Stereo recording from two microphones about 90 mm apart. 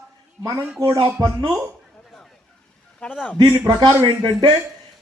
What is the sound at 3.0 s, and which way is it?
Speech, 15° left (ahead or behind).